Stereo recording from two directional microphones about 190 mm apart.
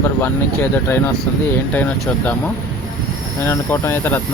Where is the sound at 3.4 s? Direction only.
15° left (ahead or behind).